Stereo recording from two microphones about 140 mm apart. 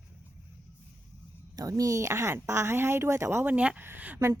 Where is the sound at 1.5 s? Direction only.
25° right (ahead or behind).